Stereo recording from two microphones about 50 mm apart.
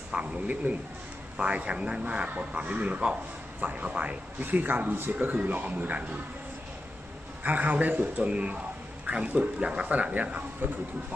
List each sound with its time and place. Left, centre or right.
0.1 s a man's voice: right
7.4 s a man's voice: right
10.6 s speech: right